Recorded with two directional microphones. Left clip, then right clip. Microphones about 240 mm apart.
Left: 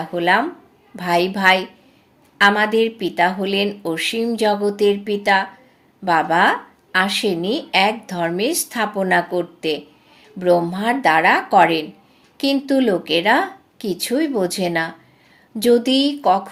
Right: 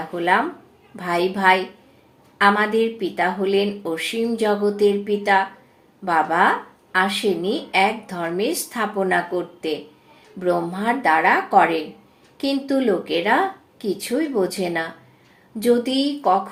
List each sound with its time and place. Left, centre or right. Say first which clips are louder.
0.9 s speech: left 3 dB; left